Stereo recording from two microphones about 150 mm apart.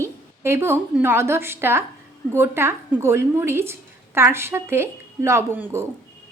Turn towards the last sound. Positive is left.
turn(degrees=-15)  # may be behind; listen again after turning